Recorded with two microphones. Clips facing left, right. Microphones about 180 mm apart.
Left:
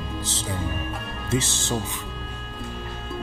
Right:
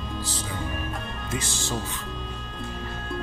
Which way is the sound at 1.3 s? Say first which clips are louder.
Left 6 dB; 25° left (ahead or behind).